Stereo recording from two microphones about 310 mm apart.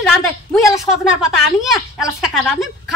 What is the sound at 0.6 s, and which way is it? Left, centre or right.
Speech, centre.